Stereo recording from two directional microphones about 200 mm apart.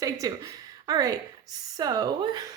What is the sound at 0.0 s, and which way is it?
A woman's voice, 15° right (ahead or behind).